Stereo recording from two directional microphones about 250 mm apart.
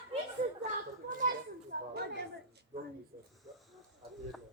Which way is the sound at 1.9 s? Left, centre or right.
Right.